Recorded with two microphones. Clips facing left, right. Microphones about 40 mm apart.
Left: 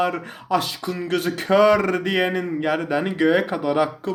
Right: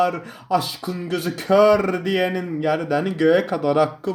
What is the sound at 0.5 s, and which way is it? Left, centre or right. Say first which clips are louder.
Speech: even; left.